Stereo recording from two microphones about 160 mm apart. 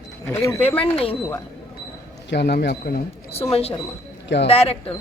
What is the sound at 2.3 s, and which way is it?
Speech, 90° left.